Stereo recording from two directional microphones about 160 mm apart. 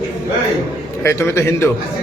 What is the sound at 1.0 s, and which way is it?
Speech, 15° left (ahead or behind).